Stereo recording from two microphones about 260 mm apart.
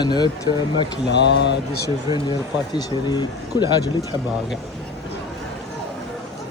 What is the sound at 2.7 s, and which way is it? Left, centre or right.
Speech, centre.